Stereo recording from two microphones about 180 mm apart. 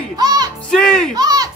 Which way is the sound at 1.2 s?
20° right (ahead or behind).